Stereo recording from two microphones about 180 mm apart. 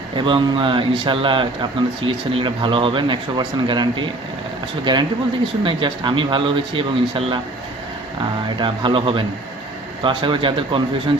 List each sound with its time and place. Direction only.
0.2 s speech: 25° right (ahead or behind)
8.5 s speech: 25° right (ahead or behind)